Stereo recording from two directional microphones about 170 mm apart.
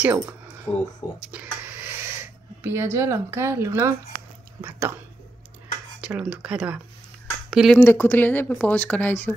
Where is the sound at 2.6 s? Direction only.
15° right (ahead or behind).